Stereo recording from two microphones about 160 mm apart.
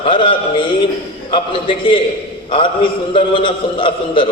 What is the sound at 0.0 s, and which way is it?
A man's voice, 30° left (ahead or behind).